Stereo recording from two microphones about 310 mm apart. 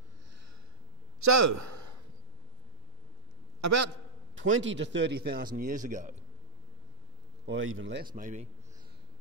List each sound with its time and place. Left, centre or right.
1.2 s a sound: right
3.6 s a man's voice: right
4.4 s speech: right
7.4 s a man's voice: right